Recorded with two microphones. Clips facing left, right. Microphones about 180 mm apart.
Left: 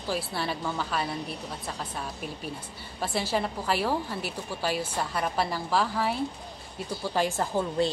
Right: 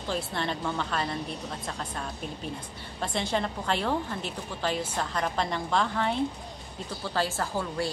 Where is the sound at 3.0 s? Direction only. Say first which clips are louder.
Left 1 dB; 5° left (ahead or behind).